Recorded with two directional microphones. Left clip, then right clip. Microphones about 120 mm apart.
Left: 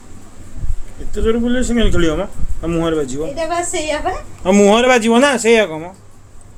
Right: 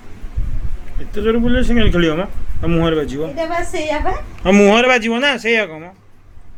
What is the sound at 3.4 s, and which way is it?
Speech, 65° left (ahead or behind).